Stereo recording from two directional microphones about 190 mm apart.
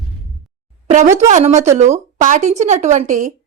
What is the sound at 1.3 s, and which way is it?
A woman's voice, 35° right (ahead or behind).